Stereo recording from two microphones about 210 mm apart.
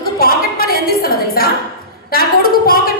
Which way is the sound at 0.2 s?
45° left (ahead or behind).